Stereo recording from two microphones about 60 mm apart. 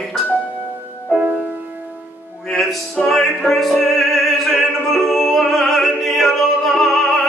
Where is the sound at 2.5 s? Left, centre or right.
Centre.